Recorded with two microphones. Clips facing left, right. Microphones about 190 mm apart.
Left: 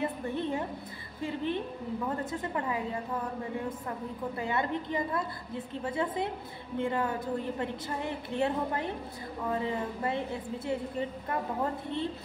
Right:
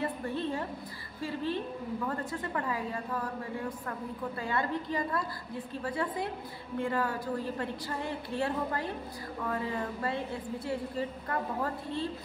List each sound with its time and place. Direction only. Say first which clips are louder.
0.0 s a sound: left 1 dB; 20° left (ahead or behind)
1.2 s a woman's voice: left 1 dB; 20° left (ahead or behind)
4.4 s a woman's voice: left 1 dB; 20° left (ahead or behind)